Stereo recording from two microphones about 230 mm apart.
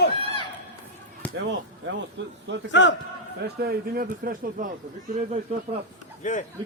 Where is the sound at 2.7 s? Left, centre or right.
Left.